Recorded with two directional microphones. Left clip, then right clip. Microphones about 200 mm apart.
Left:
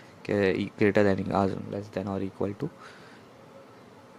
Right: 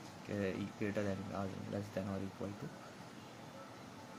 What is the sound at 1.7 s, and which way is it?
Speech, 45° left (ahead or behind).